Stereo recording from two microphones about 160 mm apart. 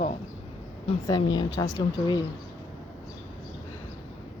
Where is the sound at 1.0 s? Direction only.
25° left (ahead or behind).